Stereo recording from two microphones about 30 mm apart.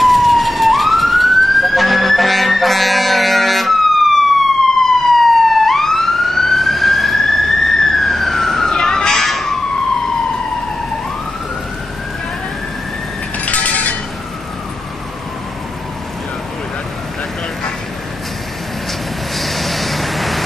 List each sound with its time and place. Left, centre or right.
0.0 s emergency vehicle: centre
8.6 s music: centre
13.5 s a sound: left
19.3 s vehicle: centre